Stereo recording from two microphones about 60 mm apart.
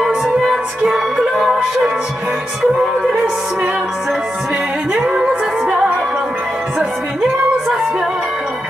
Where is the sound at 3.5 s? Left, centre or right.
Right.